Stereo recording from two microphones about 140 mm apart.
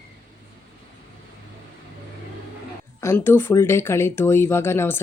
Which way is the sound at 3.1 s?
15° left (ahead or behind).